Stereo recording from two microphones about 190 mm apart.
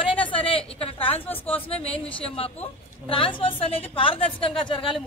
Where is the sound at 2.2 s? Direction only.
30° left (ahead or behind).